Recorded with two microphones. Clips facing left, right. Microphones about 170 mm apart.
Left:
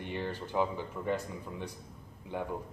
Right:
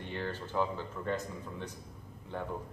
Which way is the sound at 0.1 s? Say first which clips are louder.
Left 1 dB; 15° left (ahead or behind).